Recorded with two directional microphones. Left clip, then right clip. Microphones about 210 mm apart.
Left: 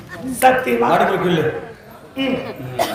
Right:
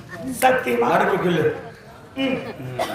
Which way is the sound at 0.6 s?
5° left (ahead or behind).